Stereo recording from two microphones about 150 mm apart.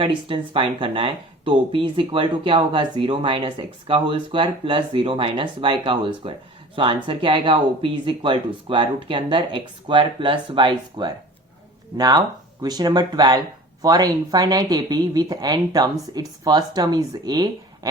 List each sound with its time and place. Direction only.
0.0 s speech: 35° right (ahead or behind)